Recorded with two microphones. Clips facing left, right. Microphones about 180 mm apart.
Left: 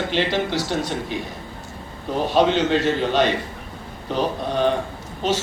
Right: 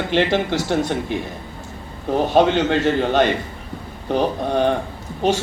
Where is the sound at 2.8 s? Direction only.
50° right (ahead or behind).